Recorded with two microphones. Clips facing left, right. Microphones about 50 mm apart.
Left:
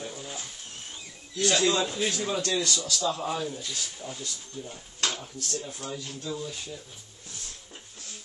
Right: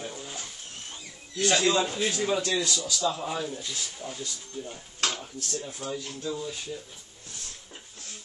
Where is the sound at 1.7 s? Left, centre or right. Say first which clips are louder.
Right 1 dB; right.